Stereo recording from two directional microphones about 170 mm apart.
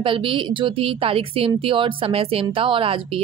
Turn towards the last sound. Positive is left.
turn(degrees=-30)  # may be behind; listen again after turning